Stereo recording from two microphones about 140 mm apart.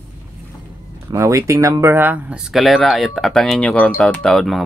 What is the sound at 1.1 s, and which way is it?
Speech, 20° right (ahead or behind).